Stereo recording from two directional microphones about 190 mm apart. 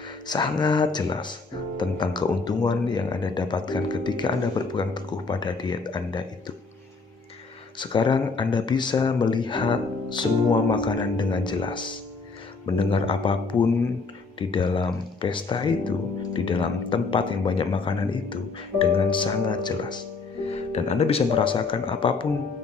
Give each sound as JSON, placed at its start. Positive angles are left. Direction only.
{"t": 0.3, "sound": "speech", "side_deg": 25}
{"t": 7.8, "sound": "speech", "side_deg": 25}
{"t": 20.5, "sound": "speech", "side_deg": 35}